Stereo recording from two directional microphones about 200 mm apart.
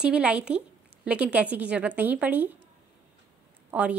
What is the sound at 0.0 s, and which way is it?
Speech, 5° right (ahead or behind).